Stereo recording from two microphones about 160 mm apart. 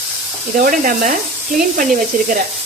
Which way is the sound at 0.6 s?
60° right (ahead or behind).